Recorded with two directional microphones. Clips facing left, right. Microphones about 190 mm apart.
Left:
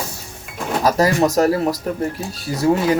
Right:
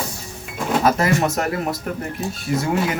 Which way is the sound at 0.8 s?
35° left (ahead or behind).